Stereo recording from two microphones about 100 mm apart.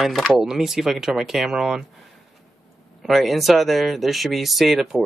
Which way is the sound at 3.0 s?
Centre (ahead or behind).